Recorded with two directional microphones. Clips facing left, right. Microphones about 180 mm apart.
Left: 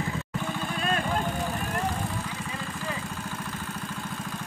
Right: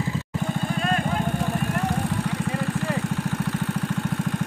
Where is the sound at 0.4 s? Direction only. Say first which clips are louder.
Right 6 dB; 45° right (ahead or behind).